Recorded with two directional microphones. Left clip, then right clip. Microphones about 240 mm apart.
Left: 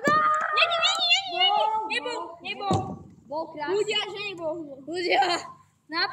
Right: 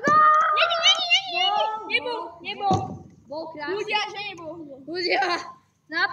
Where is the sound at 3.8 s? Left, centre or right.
Centre.